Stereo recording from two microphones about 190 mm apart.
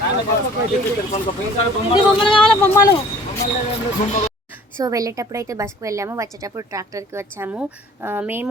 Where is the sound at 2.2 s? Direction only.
25° left (ahead or behind).